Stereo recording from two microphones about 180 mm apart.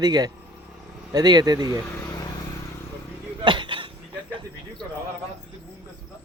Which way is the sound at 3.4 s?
25° right (ahead or behind).